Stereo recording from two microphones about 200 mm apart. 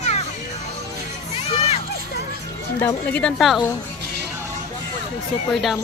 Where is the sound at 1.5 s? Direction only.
30° left (ahead or behind).